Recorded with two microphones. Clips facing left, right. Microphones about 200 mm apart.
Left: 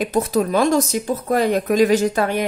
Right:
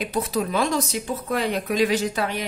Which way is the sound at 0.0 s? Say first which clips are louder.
Left 6 dB; 45° left (ahead or behind).